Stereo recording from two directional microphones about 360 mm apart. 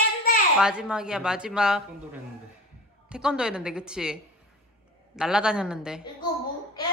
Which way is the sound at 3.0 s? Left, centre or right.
Centre.